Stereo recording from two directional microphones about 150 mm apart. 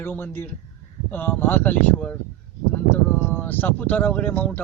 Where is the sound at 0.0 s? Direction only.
15° left (ahead or behind).